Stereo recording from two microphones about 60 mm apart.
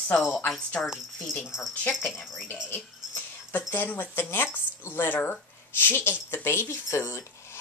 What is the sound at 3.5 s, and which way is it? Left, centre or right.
Speech, left.